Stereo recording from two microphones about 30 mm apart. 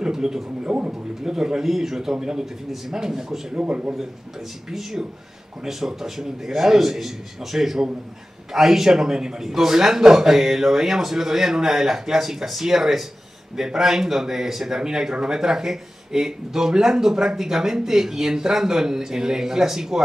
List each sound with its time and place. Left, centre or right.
0.0 s a sound: right
0.7 s a man's voice: centre
3.5 s speech: right
4.6 s a man's voice: centre